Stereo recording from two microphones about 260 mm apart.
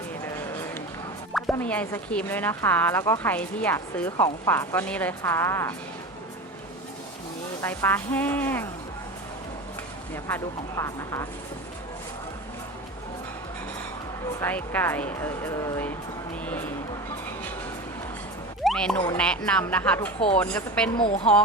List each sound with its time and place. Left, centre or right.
0.3 s run: centre
1.3 s speech: centre
7.6 s speech: centre
10.2 s speech: centre
14.3 s speech: centre
18.6 s speech: centre
20.9 s speech: left